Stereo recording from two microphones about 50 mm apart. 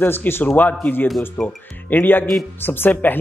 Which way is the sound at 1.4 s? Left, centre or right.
Centre.